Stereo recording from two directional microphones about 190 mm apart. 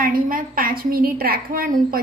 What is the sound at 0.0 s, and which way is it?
A woman's voice, 50° right (ahead or behind).